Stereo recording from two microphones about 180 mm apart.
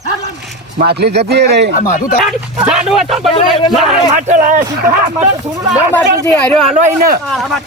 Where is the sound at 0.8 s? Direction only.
65° right (ahead or behind).